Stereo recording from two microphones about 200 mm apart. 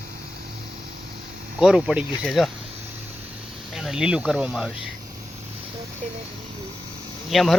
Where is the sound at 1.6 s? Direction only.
5° right (ahead or behind).